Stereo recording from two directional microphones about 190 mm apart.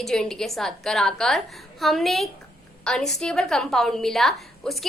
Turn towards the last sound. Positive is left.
turn(degrees=0)  # may be behind; listen again after turning